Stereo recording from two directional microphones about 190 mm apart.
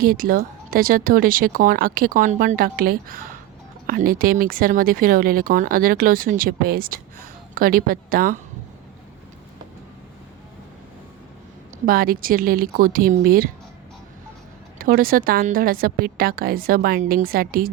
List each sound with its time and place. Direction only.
0.0 s speech: 50° right (ahead or behind)
11.9 s speech: 50° right (ahead or behind)
14.8 s speech: 50° right (ahead or behind)